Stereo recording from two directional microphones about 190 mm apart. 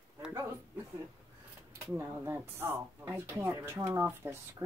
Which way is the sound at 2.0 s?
10° right (ahead or behind).